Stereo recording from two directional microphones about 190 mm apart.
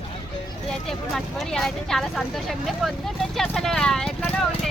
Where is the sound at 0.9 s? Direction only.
Centre (ahead or behind).